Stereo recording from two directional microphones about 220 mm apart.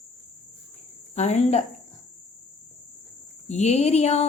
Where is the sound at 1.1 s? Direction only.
30° left (ahead or behind).